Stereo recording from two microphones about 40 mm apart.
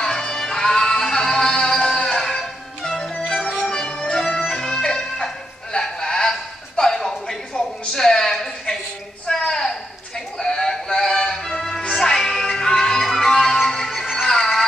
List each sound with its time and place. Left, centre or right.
0.0 s music: centre
6.8 s a sound: centre
10.4 s synthetic singing: centre
11.4 s music: centre